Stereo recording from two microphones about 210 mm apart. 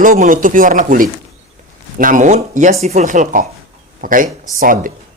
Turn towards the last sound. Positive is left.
turn(degrees=-40)  # may be behind; listen again after turning